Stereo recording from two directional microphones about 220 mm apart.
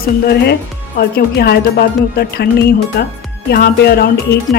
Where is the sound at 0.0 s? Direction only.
45° left (ahead or behind).